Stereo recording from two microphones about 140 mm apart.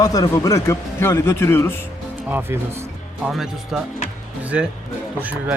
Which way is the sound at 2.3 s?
15° right (ahead or behind).